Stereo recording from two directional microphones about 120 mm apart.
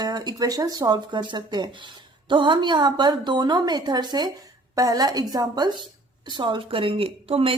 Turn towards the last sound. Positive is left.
turn(degrees=-50)  # may be behind; listen again after turning